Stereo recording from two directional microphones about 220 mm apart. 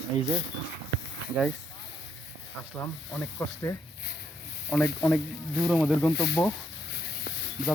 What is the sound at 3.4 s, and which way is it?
Speech, 10° left (ahead or behind).